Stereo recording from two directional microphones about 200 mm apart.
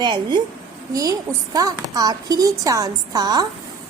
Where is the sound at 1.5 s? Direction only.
20° right (ahead or behind).